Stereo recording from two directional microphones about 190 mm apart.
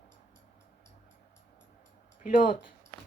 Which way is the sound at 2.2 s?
45° left (ahead or behind).